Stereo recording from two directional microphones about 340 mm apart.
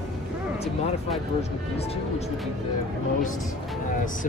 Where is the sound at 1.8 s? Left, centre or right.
Centre.